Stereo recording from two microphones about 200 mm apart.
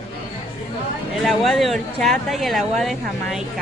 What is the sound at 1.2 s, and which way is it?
Speech, centre (ahead or behind).